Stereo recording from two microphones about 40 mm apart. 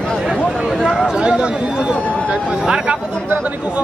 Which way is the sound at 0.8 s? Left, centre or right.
Centre.